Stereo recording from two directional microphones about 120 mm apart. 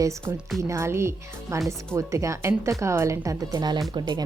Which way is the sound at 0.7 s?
25° right (ahead or behind).